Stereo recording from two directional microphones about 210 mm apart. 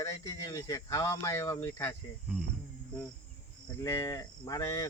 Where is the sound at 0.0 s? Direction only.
15° left (ahead or behind).